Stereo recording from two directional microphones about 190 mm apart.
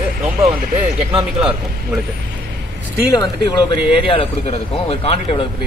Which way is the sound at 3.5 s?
25° left (ahead or behind).